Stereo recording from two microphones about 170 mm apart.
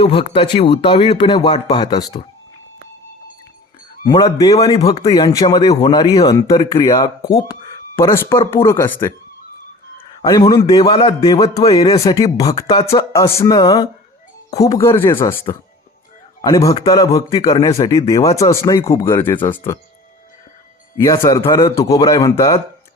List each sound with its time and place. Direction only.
0.0 s speech: 35° left (ahead or behind)
4.0 s a man's voice: 25° left (ahead or behind)
16.4 s speech: 20° left (ahead or behind)
17.7 s speech: 35° left (ahead or behind)
18.1 s speech: 20° left (ahead or behind)
21.0 s speech: 20° left (ahead or behind)